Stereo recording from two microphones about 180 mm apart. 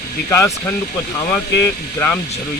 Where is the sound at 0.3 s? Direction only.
15° left (ahead or behind).